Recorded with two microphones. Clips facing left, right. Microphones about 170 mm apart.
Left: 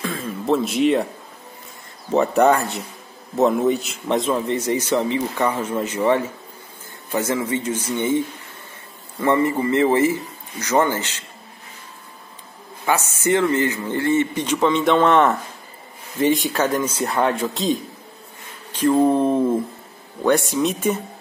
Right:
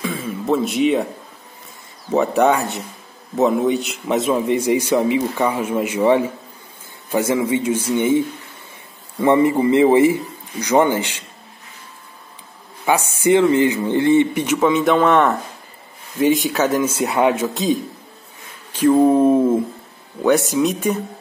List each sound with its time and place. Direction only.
0.0 s a sound: 5° right (ahead or behind)
2.1 s a man's voice: centre (ahead or behind)
9.2 s a man's voice: 15° right (ahead or behind)
12.8 s a man's voice: 15° right (ahead or behind)
18.9 s a man's voice: 5° right (ahead or behind)